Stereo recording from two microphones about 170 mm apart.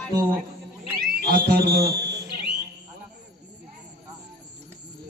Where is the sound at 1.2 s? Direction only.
60° right (ahead or behind).